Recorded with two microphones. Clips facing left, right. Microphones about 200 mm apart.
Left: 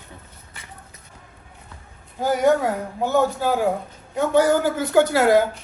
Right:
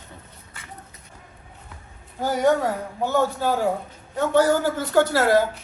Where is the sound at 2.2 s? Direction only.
10° left (ahead or behind).